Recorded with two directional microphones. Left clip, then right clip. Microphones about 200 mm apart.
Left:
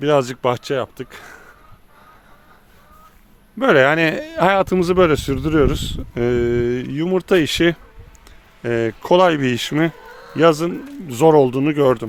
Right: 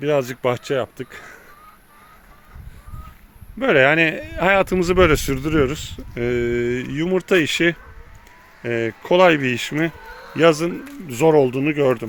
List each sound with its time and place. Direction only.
0.0 s speech: 15° left (ahead or behind)
0.5 s speech: 5° left (ahead or behind)
3.6 s speech: 25° left (ahead or behind)